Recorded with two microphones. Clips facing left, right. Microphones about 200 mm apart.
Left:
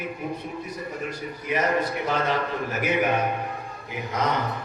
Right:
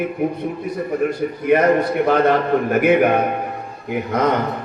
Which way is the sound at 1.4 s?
60° right (ahead or behind).